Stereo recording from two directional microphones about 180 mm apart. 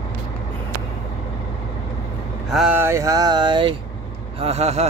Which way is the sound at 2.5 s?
Centre (ahead or behind).